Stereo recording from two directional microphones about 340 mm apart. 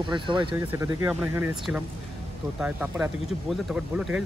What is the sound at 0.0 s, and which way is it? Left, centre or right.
Speech, centre.